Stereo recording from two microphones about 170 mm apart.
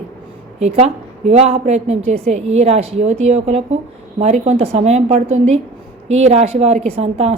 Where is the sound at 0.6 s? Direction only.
40° right (ahead or behind).